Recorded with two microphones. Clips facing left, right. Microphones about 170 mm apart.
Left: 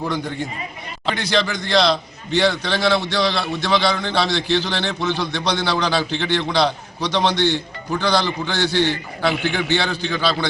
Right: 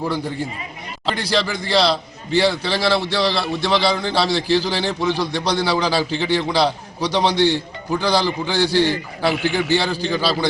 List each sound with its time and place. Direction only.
0.0 s a man's voice: 5° right (ahead or behind)
8.7 s a man's voice: 35° right (ahead or behind)
9.2 s a man's voice: 5° right (ahead or behind)